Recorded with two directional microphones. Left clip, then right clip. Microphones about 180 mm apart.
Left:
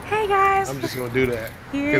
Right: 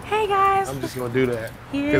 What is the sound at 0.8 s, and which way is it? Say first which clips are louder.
Speech: even; 45° right (ahead or behind).